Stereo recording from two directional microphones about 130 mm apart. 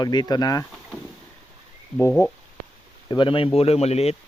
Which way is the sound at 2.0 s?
20° left (ahead or behind).